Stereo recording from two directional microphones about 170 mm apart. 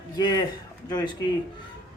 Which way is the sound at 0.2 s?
25° left (ahead or behind).